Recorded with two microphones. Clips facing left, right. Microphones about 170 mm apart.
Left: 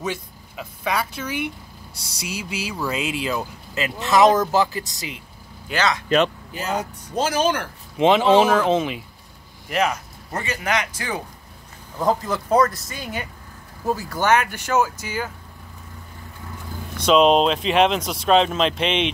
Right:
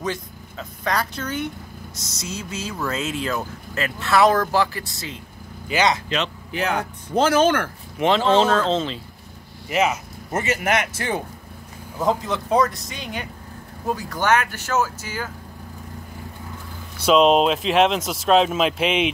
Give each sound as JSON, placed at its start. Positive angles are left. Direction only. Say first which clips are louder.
{"t": 0.0, "sound": "speech", "louder": "right 1 dB", "side_deg": 10}
{"t": 5.7, "sound": "speech", "louder": "right 2 dB", "side_deg": 0}
{"t": 6.0, "sound": "speech", "louder": "left 7 dB", "side_deg": 50}
{"t": 6.5, "sound": "speech", "louder": "right 2 dB", "side_deg": -65}
{"t": 8.0, "sound": "speech", "louder": "left 2 dB", "side_deg": 15}
{"t": 9.7, "sound": "speech", "louder": "right 1 dB", "side_deg": -5}
{"t": 10.3, "sound": "speech", "louder": "right 4 dB", "side_deg": -25}
{"t": 12.0, "sound": "speech", "louder": "left 1 dB", "side_deg": 0}
{"t": 17.0, "sound": "speech", "louder": "even", "side_deg": 0}